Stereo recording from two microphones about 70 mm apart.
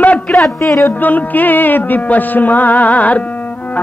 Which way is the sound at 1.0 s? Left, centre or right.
Left.